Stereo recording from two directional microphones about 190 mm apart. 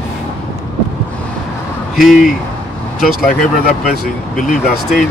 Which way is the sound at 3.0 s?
50° left (ahead or behind).